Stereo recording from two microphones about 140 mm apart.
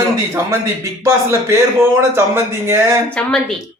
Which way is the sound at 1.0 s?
20° right (ahead or behind).